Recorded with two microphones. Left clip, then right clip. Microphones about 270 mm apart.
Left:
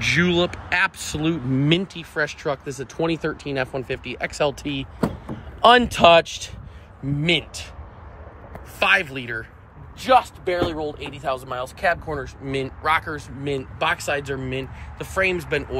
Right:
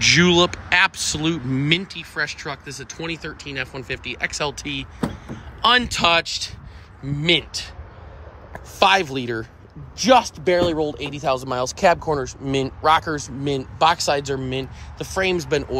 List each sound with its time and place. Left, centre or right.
0.0 s speech: centre
8.7 s speech: centre
10.4 s speech: right
11.0 s speech: right